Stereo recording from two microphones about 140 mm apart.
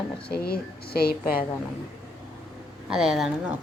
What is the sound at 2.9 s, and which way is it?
Speech, 5° right (ahead or behind).